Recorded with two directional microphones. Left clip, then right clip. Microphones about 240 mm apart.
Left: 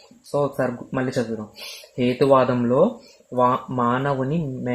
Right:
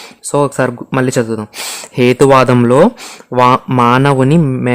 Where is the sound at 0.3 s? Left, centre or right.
Right.